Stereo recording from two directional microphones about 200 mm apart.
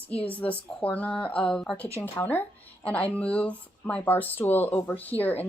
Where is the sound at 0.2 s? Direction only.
5° left (ahead or behind).